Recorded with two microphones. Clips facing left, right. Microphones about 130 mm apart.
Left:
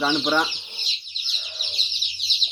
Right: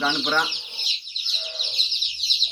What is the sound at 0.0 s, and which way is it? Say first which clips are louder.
Speech: left 2 dB; 10° left (ahead or behind).